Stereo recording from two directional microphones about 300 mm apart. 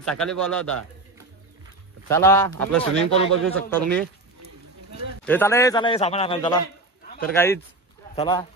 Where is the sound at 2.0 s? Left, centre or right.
Centre.